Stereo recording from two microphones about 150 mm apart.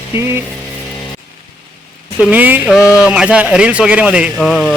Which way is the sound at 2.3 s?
10° right (ahead or behind).